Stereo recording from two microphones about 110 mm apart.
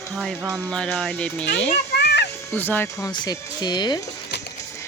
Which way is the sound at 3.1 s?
40° left (ahead or behind).